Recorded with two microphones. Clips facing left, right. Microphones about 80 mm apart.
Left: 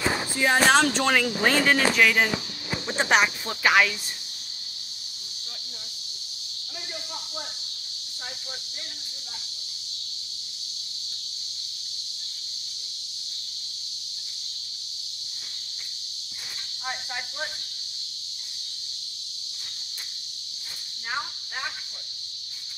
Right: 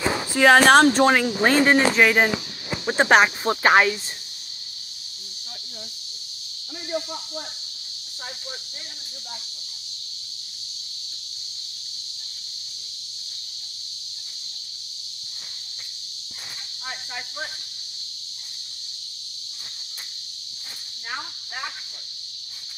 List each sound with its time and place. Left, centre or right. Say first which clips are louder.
0.4 s speech: right 7 dB; right
0.8 s speech: right 6 dB; right